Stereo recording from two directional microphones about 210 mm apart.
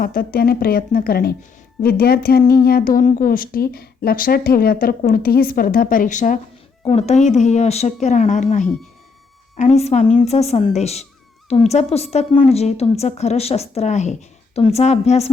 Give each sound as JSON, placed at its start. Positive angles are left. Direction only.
{"t": 0.0, "sound": "a woman's voice", "side_deg": 45}